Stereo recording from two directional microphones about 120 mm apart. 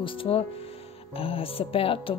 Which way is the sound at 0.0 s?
50° left (ahead or behind).